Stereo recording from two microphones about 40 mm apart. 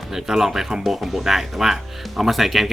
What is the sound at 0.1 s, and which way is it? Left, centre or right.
Speech, centre.